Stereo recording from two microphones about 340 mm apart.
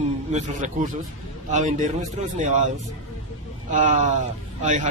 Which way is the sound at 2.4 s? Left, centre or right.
Right.